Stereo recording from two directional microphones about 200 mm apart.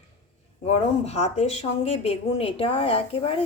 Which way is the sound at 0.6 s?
30° left (ahead or behind).